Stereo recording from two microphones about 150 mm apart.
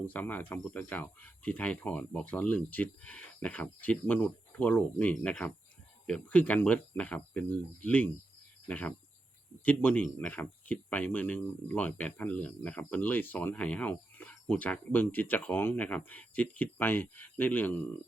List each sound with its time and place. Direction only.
0.0 s speech: 10° left (ahead or behind)